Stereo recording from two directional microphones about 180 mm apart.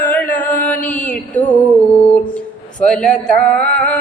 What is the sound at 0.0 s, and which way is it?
Chant, 10° left (ahead or behind).